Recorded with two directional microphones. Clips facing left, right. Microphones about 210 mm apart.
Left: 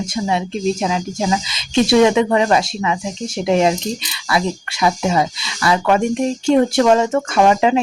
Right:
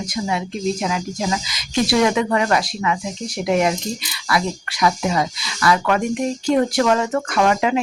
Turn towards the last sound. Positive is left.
turn(degrees=25)  # may be behind; listen again after turning